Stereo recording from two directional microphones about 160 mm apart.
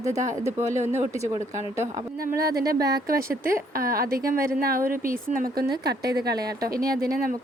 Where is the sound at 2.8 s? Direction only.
20° right (ahead or behind).